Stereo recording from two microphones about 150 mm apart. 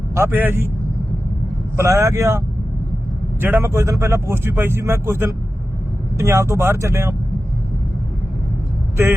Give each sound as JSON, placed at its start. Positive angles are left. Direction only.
{"t": 0.1, "sound": "speech", "side_deg": -15}
{"t": 1.7, "sound": "speech", "side_deg": -20}
{"t": 3.4, "sound": "speech", "side_deg": -15}